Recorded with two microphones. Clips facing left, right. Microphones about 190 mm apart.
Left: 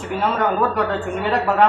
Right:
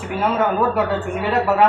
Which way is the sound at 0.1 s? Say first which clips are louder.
Right 1 dB; 5° right (ahead or behind).